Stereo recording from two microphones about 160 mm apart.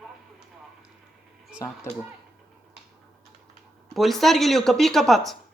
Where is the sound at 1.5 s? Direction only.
15° left (ahead or behind).